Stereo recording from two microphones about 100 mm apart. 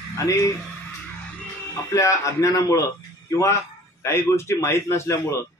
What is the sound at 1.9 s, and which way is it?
Speech, 30° left (ahead or behind).